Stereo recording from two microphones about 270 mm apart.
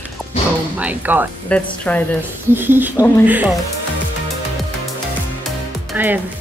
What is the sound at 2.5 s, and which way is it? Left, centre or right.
Speech, centre.